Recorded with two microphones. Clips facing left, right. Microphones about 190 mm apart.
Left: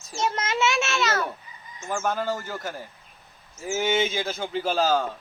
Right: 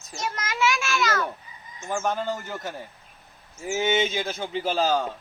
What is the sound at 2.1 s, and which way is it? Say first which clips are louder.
Speech: left 1 dB; 15° right (ahead or behind).